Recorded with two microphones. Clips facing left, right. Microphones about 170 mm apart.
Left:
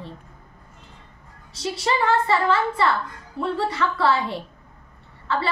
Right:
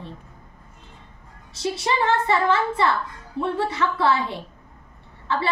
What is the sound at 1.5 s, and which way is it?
A woman's voice, 20° right (ahead or behind).